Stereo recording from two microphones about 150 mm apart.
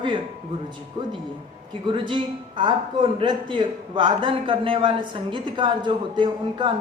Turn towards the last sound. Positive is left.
turn(degrees=-30)  # may be behind; listen again after turning